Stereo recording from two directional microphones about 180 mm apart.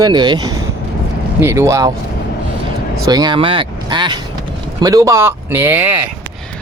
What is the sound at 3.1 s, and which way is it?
Speech, 25° right (ahead or behind).